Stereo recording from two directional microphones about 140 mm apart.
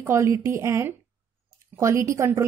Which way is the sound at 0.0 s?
20° right (ahead or behind).